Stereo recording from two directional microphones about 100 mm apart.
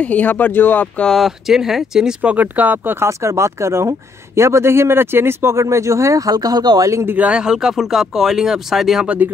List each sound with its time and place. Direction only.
0.0 s speech: 15° left (ahead or behind)
1.1 s speech: centre (ahead or behind); by 6.9 s 40° right (ahead or behind)
6.9 s speech: 30° right (ahead or behind)
7.2 s speech: 10° right (ahead or behind)